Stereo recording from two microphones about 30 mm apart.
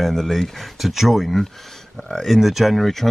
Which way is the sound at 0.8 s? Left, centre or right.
Centre.